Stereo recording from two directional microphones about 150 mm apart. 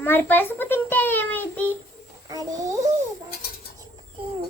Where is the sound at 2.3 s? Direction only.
25° right (ahead or behind).